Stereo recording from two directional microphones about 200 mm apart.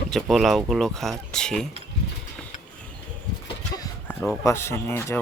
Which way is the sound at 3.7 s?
10° left (ahead or behind).